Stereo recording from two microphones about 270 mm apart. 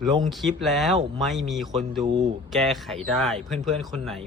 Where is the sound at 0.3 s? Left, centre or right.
Centre.